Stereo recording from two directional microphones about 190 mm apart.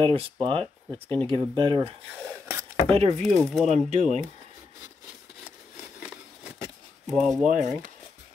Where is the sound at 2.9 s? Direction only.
35° right (ahead or behind).